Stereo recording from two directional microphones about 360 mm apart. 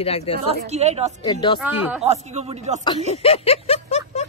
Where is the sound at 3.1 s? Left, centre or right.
Centre.